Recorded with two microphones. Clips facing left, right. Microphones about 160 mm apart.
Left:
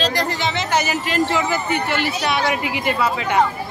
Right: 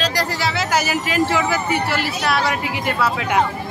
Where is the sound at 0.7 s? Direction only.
5° right (ahead or behind).